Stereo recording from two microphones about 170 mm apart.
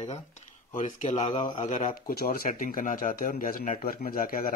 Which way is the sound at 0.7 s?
45° left (ahead or behind).